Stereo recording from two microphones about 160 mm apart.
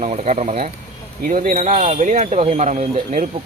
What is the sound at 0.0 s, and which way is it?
Speech, 45° right (ahead or behind).